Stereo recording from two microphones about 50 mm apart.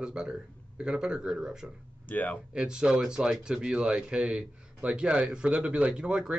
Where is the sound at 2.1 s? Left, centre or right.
Left.